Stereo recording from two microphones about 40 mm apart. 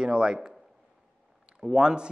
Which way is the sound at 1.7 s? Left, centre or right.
Right.